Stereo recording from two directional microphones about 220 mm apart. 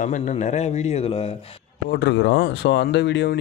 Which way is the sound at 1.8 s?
50° left (ahead or behind).